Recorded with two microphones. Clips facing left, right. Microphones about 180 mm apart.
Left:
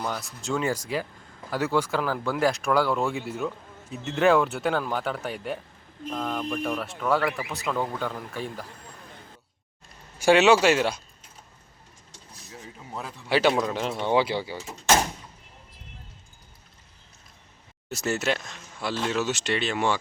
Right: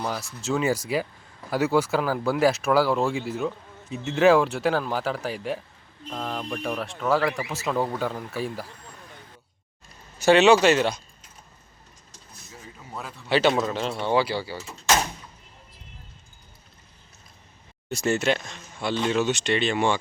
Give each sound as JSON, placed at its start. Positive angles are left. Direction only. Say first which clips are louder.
{"t": 0.0, "sound": "speech", "louder": "right 2 dB", "side_deg": 0}
{"t": 10.2, "sound": "speech", "louder": "right 2 dB", "side_deg": 10}
{"t": 12.9, "sound": "speech", "louder": "right 1 dB", "side_deg": 15}
{"t": 17.8, "sound": "speech", "louder": "right 3 dB", "side_deg": 5}